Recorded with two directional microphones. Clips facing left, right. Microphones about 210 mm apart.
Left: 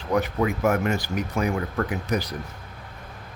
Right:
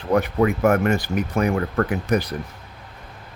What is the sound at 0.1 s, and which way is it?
Speech, 55° right (ahead or behind).